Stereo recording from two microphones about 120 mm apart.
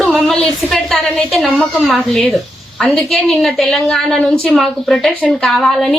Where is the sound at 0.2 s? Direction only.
5° left (ahead or behind).